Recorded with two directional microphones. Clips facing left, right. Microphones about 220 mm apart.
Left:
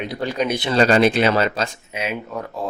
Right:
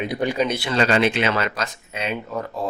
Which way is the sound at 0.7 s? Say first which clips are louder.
Left 6 dB; 40° left (ahead or behind).